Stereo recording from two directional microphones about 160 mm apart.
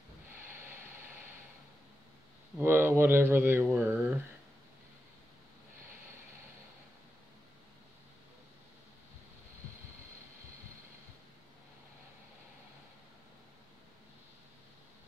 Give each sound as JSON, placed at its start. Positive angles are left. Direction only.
{"t": 0.6, "sound": "vehicle", "side_deg": -15}
{"t": 2.6, "sound": "speech", "side_deg": -15}